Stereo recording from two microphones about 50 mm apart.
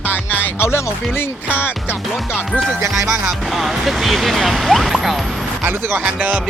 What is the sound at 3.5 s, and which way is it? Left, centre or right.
Speech, centre.